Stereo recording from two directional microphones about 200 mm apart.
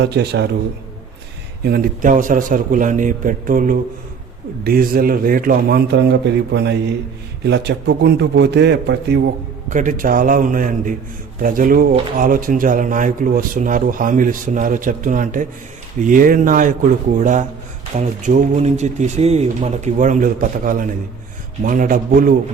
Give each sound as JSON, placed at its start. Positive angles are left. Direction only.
{"t": 0.0, "sound": "a man's voice", "side_deg": -55}
{"t": 1.6, "sound": "a man's voice", "side_deg": -45}
{"t": 9.6, "sound": "a man's voice", "side_deg": -40}
{"t": 17.9, "sound": "a man's voice", "side_deg": -40}